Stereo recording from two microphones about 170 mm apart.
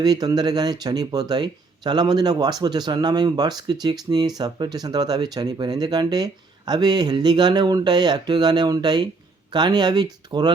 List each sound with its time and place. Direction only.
0.0 s speech: 25° right (ahead or behind)